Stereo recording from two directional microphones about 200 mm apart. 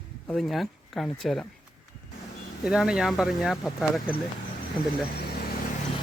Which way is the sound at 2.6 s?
5° right (ahead or behind).